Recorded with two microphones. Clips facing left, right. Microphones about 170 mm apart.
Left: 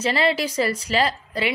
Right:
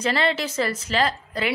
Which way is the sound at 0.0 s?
5° left (ahead or behind).